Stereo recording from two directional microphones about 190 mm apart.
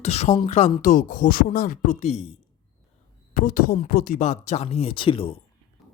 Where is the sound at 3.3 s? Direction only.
50° left (ahead or behind); by 5.4 s 30° left (ahead or behind).